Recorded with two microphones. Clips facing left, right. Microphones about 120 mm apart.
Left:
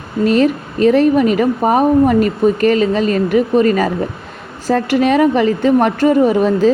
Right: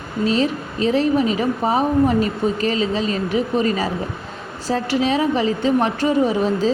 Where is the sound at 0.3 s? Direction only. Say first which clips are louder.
Left 7 dB; 55° left (ahead or behind).